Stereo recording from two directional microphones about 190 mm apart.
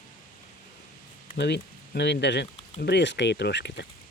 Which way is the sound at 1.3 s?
60° left (ahead or behind).